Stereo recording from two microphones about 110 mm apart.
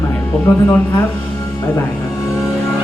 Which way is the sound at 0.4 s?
15° left (ahead or behind).